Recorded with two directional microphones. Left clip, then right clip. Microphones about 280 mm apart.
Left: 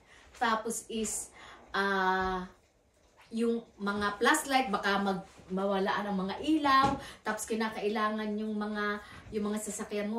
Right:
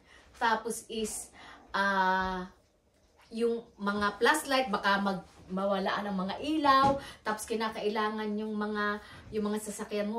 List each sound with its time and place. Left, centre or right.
0.4 s a woman's voice: centre